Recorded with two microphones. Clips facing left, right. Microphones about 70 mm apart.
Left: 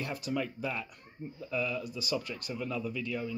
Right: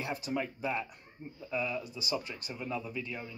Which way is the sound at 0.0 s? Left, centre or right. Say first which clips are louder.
Left 1 dB; right.